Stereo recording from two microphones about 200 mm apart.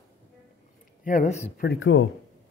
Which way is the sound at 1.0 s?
40° left (ahead or behind).